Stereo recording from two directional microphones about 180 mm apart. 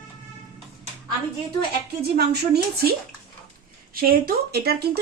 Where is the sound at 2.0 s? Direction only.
60° right (ahead or behind).